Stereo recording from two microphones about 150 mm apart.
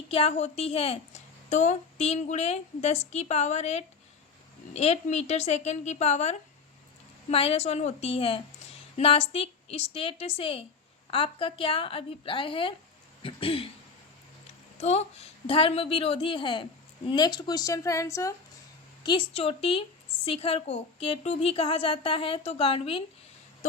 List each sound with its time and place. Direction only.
0.1 s a woman's voice: 40° left (ahead or behind)
14.8 s a woman's voice: 45° left (ahead or behind); by 18.3 s 20° left (ahead or behind)
19.0 s a woman's voice: 35° left (ahead or behind)